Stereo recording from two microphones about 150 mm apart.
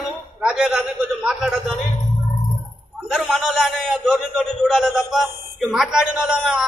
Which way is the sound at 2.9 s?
Centre (ahead or behind).